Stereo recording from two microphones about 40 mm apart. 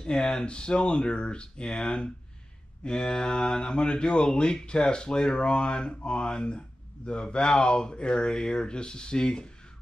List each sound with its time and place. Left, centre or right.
0.0 s speech: left